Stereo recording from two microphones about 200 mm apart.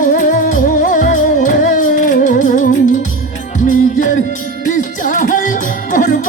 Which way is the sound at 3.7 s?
40° left (ahead or behind).